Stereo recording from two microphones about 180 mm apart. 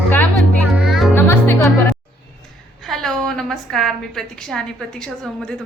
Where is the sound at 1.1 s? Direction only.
15° left (ahead or behind).